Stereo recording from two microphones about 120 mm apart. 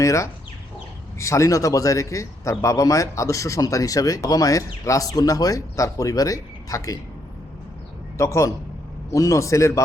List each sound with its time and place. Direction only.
0.0 s a man's voice: 25° left (ahead or behind)
8.2 s a man's voice: 25° left (ahead or behind)